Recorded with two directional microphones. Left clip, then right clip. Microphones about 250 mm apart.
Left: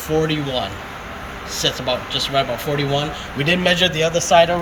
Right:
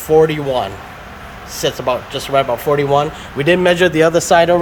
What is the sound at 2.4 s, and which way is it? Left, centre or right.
Speech, centre.